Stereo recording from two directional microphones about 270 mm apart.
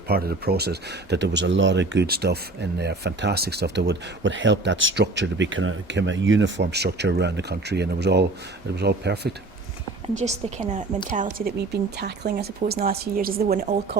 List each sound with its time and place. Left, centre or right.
0.1 s speech: right
10.2 s a woman's voice: right